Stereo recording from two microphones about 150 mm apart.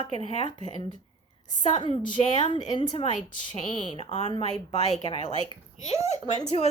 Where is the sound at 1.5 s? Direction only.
50° left (ahead or behind).